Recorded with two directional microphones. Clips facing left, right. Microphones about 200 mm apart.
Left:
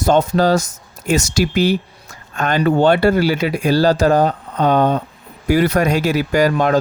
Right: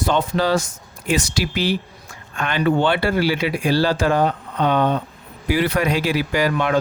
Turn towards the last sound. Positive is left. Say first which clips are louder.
# left 5 dB
turn(degrees=40)  # may be behind; listen again after turning